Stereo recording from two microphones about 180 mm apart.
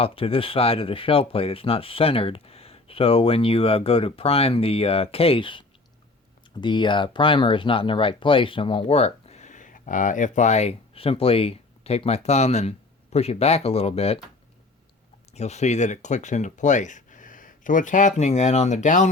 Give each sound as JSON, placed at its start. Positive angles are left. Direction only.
{"t": 0.0, "sound": "speech", "side_deg": 30}
{"t": 15.3, "sound": "speech", "side_deg": 40}